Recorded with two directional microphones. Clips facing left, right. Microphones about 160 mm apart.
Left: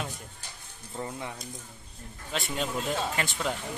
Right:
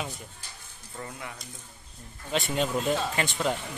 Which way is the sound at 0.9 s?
25° left (ahead or behind).